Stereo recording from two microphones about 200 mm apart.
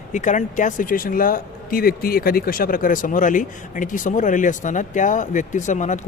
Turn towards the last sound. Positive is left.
turn(degrees=40)  # may be behind; listen again after turning